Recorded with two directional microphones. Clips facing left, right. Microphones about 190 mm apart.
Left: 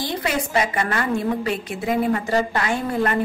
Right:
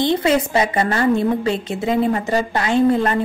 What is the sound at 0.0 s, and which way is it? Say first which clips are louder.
A woman's voice: right 8 dB; 25° right (ahead or behind).